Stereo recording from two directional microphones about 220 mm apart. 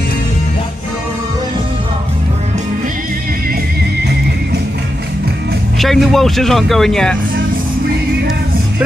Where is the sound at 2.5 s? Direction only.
40° right (ahead or behind).